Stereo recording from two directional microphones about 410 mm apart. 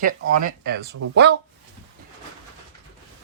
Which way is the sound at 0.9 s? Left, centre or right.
Right.